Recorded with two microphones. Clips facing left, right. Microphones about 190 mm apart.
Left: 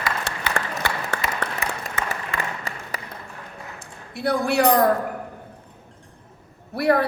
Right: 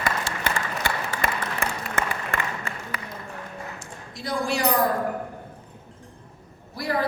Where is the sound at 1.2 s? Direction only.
50° right (ahead or behind).